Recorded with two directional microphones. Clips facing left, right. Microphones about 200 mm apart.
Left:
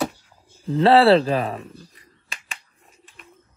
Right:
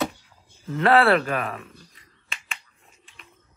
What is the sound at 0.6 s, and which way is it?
Speech, 30° left (ahead or behind).